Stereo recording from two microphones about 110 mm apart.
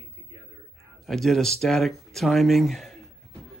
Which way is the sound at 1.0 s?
Centre (ahead or behind).